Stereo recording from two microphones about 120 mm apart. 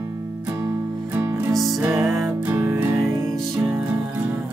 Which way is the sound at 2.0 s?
5° right (ahead or behind).